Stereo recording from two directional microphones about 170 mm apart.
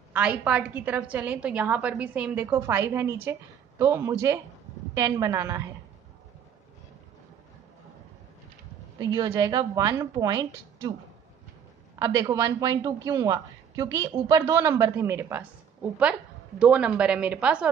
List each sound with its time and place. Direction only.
0.1 s a woman's voice: 10° right (ahead or behind)
8.9 s a woman's voice: 20° right (ahead or behind)
12.0 s a woman's voice: 20° right (ahead or behind); by 17.6 s 5° right (ahead or behind)